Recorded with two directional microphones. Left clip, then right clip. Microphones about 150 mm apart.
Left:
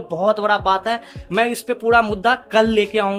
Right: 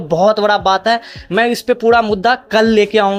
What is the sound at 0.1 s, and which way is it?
Speech, 25° right (ahead or behind).